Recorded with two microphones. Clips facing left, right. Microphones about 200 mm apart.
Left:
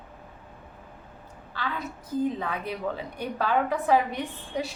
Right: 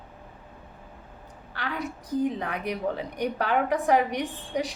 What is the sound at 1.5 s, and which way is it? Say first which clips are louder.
A woman's voice: right 1 dB; 15° right (ahead or behind).